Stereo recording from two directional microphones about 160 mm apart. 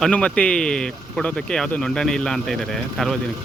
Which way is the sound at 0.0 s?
5° left (ahead or behind).